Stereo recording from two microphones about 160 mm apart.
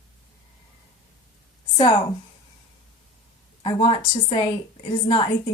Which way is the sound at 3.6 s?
35° left (ahead or behind).